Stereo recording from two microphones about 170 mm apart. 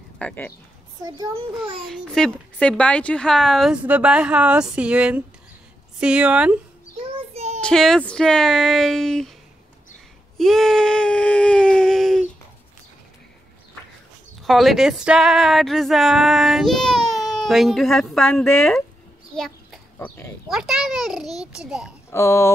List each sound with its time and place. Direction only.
0.2 s speech: 15° left (ahead or behind)
1.0 s a child's voice: 20° right (ahead or behind)
1.9 s speech: 5° left (ahead or behind)
7.2 s child singing: 40° right (ahead or behind)
7.6 s speech: 5° left (ahead or behind)
10.3 s a sound: centre (ahead or behind)
14.4 s speech: centre (ahead or behind)
19.3 s a sound: 5° left (ahead or behind)
20.4 s speech: centre (ahead or behind)
22.1 s speech: 15° left (ahead or behind)